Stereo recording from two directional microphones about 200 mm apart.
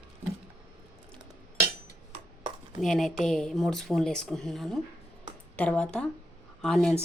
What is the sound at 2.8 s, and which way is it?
Speech, centre (ahead or behind).